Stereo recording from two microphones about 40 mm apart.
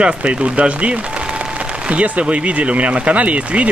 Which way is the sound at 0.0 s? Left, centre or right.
Right.